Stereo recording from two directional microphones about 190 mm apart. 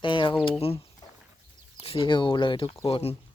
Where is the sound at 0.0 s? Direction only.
25° left (ahead or behind).